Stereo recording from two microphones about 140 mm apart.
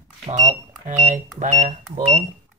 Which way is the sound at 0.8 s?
65° right (ahead or behind).